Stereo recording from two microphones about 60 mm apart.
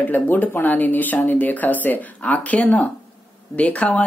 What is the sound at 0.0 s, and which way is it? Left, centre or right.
Speech, left.